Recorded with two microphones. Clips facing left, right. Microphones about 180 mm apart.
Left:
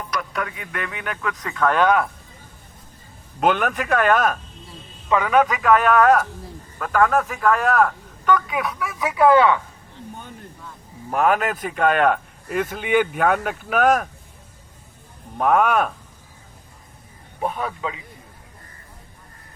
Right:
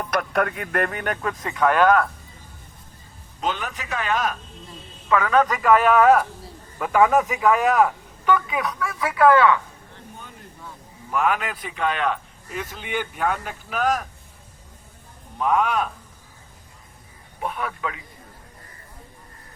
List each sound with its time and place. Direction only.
0.0 s speech: 55° right (ahead or behind)
1.3 s speech: 25° right (ahead or behind)
1.5 s speech: 5° right (ahead or behind)
3.4 s speech: 60° left (ahead or behind)
5.0 s a man's voice: 15° left (ahead or behind)
5.5 s a man's voice: centre (ahead or behind)
8.8 s speech: 15° left (ahead or behind)
11.1 s speech: 45° left (ahead or behind)
15.4 s speech: 50° left (ahead or behind)
17.4 s speech: 30° left (ahead or behind)